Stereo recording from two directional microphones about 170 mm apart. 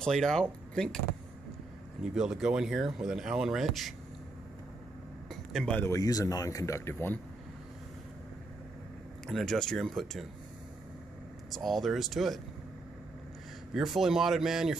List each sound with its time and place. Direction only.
0.0 s speech: 5° left (ahead or behind)
2.1 s speech: 5° right (ahead or behind)
5.3 s speech: centre (ahead or behind)
9.3 s speech: centre (ahead or behind)
11.5 s speech: centre (ahead or behind)
13.7 s speech: centre (ahead or behind)